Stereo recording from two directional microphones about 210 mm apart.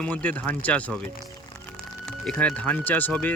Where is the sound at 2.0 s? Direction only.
5° left (ahead or behind).